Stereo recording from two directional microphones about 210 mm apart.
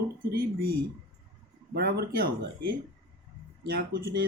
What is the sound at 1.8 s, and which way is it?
Speech, 50° right (ahead or behind).